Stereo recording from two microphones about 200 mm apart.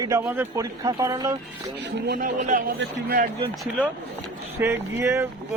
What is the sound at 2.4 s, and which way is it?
Speech, 40° right (ahead or behind).